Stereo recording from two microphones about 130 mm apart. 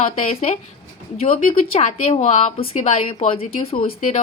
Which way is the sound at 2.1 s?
55° left (ahead or behind).